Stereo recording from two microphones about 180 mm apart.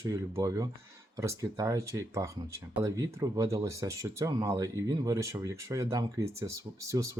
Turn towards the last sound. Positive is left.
turn(degrees=-15)  # may be behind; listen again after turning